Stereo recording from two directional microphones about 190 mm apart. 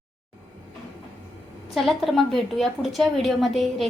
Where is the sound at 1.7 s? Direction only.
Centre (ahead or behind).